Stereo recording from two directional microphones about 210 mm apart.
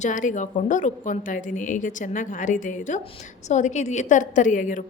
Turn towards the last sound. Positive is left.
turn(degrees=35)  # may be behind; listen again after turning